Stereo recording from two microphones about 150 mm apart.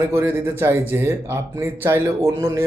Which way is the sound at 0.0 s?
15° right (ahead or behind).